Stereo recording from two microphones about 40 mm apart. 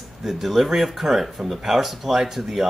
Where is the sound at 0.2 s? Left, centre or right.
Centre.